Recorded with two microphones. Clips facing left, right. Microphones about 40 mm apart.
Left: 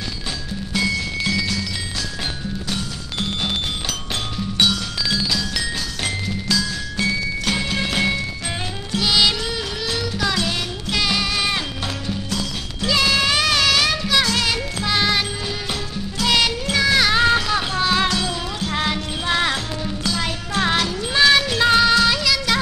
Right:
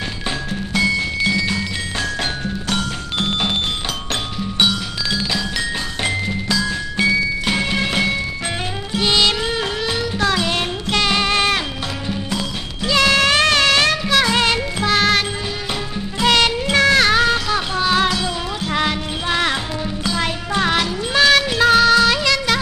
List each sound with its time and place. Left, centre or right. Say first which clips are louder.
0.7 s music: right 4 dB; centre
4.6 s music: right 1 dB; centre
11.0 s music: right 4 dB; centre
16.2 s music: right 4 dB; centre